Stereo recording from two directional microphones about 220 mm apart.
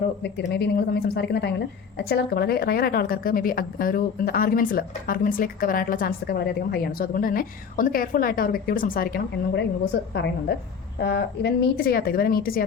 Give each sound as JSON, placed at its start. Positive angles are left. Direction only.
{"t": 0.2, "sound": "speech", "side_deg": 50}